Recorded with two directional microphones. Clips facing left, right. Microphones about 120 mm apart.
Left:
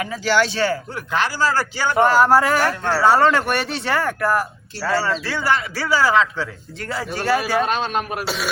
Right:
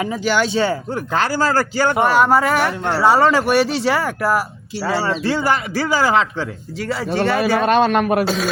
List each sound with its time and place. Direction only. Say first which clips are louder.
0.0 s speech: right 1 dB; 20° right (ahead or behind); by 1.5 s 35° right (ahead or behind)
2.0 s speech: left 2 dB; centre (ahead or behind)
2.8 s speech: right 2 dB; 15° right (ahead or behind)
3.1 s a man's voice: right 2 dB; 5° right (ahead or behind); by 6.4 s 30° right (ahead or behind)
6.7 s speech: right 6 dB; centre (ahead or behind)
7.6 s a man's voice: right 7 dB; 55° right (ahead or behind)